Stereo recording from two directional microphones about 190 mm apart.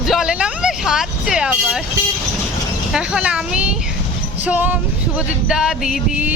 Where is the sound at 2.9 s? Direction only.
5° right (ahead or behind).